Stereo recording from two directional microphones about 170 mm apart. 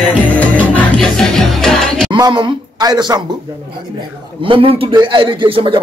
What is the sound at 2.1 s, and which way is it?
A man's voice, 25° right (ahead or behind).